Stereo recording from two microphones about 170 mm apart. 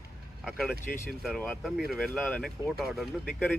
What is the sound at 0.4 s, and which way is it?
Vehicle, 5° right (ahead or behind).